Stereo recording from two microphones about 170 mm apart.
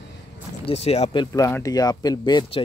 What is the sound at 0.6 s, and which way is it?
Speech, 35° left (ahead or behind).